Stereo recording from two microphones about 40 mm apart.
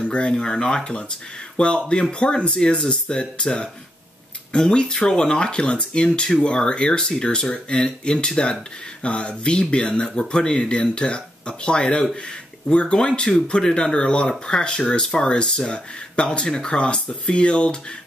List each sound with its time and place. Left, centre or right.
0.0 s speech: left
1.9 s speech: left